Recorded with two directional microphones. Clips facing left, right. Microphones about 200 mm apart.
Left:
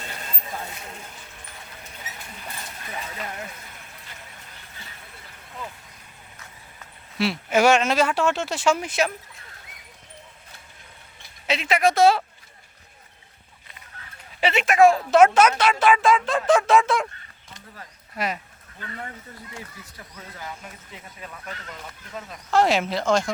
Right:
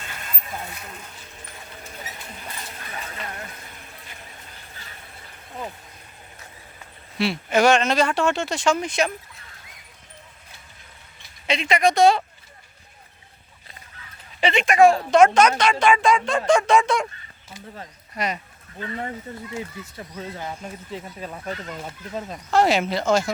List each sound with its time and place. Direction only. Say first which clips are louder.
0.0 s a sound: left 1 dB; 35° left (ahead or behind)
7.2 s speech: right 1 dB; 5° left (ahead or behind)
11.4 s speech: right 1 dB; 5° left (ahead or behind)
14.4 s speech: right 1 dB; 5° left (ahead or behind)
18.1 s speech: right 1 dB; centre (ahead or behind)
19.5 s speech: right 9 dB; 25° right (ahead or behind)
22.5 s speech: right 1 dB; centre (ahead or behind)